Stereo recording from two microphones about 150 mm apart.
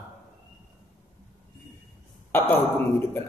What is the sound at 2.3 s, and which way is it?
Speech, 15° left (ahead or behind).